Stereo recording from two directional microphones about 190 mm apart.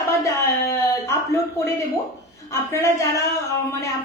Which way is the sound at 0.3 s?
15° left (ahead or behind).